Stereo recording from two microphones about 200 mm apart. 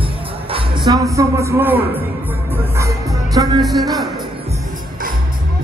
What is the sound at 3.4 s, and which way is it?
Music, 20° right (ahead or behind).